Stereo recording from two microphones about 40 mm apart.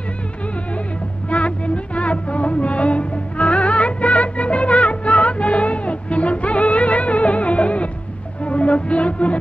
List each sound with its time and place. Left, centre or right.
1.3 s music: left